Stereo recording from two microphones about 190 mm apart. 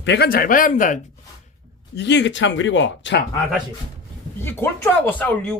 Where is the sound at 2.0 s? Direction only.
65° left (ahead or behind).